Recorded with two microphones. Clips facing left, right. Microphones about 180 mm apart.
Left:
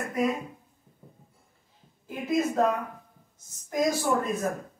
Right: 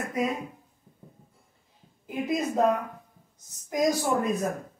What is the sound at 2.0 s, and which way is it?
Speech, 15° right (ahead or behind).